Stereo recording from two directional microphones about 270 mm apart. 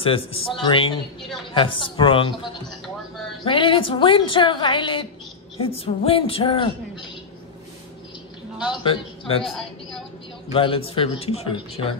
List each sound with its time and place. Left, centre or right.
0.0 s a woman's voice: left
8.8 s speech: centre
9.4 s a woman's voice: centre
10.5 s a woman's voice: centre